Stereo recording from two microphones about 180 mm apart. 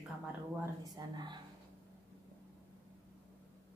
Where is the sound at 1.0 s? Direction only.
20° right (ahead or behind).